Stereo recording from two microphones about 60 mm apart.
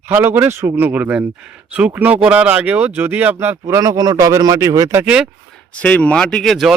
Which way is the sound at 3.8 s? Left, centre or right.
Right.